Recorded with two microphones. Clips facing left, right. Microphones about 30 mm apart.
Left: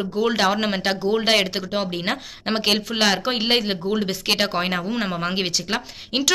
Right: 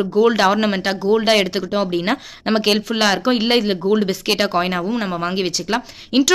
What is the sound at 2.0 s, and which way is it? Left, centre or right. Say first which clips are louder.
Speech: right 5 dB; centre.